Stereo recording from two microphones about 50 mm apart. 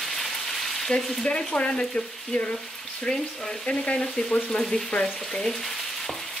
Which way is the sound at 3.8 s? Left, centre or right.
Left.